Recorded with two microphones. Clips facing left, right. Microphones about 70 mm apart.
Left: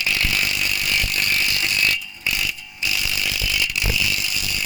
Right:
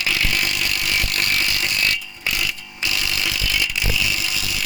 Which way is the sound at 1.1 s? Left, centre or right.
Right.